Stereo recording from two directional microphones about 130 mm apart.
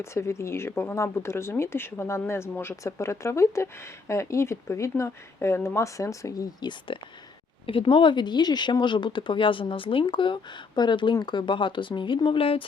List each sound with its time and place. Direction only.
0.0 s speech: 20° left (ahead or behind); by 12.6 s 45° left (ahead or behind)